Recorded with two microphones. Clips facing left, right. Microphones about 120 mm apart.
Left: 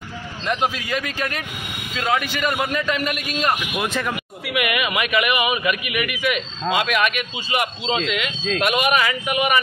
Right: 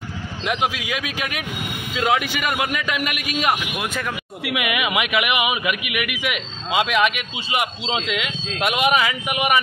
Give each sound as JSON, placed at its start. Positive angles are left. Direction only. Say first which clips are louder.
{"t": 0.5, "sound": "a man's voice", "louder": "left 1 dB", "side_deg": -10}
{"t": 4.6, "sound": "a man's voice", "louder": "left 1 dB", "side_deg": -15}